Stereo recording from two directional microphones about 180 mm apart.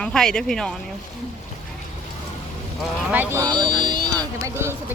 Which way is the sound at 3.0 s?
10° right (ahead or behind).